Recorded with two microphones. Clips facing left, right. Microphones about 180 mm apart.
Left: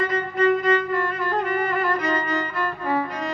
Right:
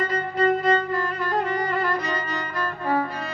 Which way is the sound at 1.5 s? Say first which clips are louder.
Left 1 dB; 35° right (ahead or behind).